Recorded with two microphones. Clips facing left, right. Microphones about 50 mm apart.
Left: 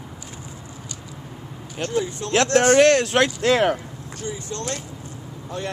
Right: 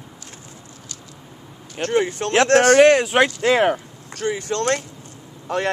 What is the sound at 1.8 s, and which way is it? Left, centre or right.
Speech, right.